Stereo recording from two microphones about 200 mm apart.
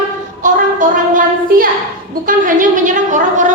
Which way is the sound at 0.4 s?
40° right (ahead or behind).